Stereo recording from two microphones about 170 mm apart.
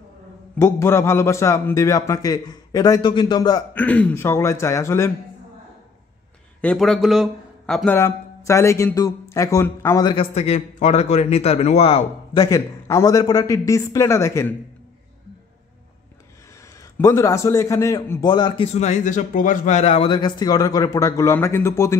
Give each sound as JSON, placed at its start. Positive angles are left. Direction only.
{"t": 0.6, "sound": "a man's voice", "side_deg": 15}
{"t": 3.7, "sound": "speech", "side_deg": 10}
{"t": 6.6, "sound": "speech", "side_deg": 5}
{"t": 10.1, "sound": "a man's voice", "side_deg": 40}
{"t": 12.4, "sound": "a man's voice", "side_deg": 20}
{"t": 17.0, "sound": "a man's voice", "side_deg": 15}
{"t": 18.7, "sound": "a man's voice", "side_deg": 40}